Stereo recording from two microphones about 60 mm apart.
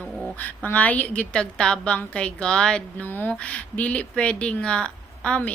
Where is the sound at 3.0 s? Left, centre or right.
Left.